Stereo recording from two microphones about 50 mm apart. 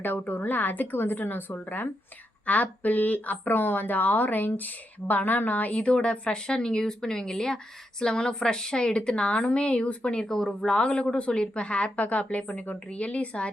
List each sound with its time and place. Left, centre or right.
0.0 s a woman's voice: left